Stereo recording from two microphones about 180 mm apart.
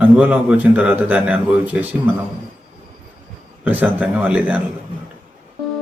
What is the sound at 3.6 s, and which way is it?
Speech, 10° right (ahead or behind).